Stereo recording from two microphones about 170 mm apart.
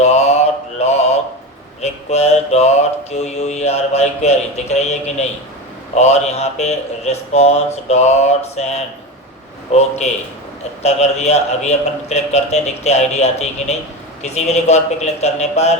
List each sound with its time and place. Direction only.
0.0 s mantra: 40° left (ahead or behind)